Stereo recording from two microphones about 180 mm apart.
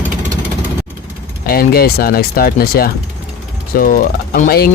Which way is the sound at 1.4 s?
55° left (ahead or behind).